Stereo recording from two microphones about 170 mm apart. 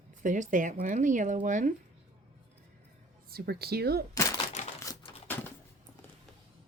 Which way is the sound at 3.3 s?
65° right (ahead or behind).